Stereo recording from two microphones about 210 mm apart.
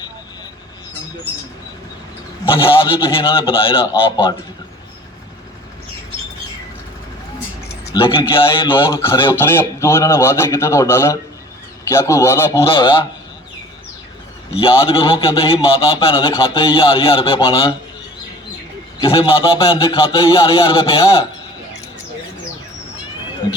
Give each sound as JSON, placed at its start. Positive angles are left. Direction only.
{"t": 3.3, "sound": "a man's voice", "side_deg": 25}
{"t": 7.9, "sound": "a man's voice", "side_deg": 25}
{"t": 8.7, "sound": "a man's voice", "side_deg": 15}
{"t": 12.6, "sound": "a man's voice", "side_deg": 25}
{"t": 14.5, "sound": "a man's voice", "side_deg": 25}
{"t": 18.9, "sound": "a man's voice", "side_deg": 25}